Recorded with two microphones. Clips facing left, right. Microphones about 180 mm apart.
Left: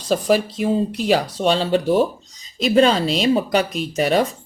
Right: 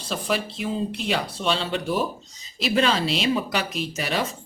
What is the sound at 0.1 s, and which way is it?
Speech, 40° left (ahead or behind).